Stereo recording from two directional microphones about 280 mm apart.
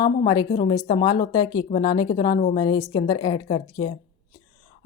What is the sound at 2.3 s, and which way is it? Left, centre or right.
Speech, left.